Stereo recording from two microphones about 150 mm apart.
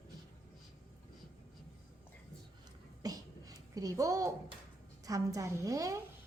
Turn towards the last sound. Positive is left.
turn(degrees=-25)  # may be behind; listen again after turning